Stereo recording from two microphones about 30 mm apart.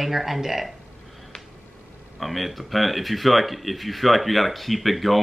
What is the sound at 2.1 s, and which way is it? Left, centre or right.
A man's voice, centre.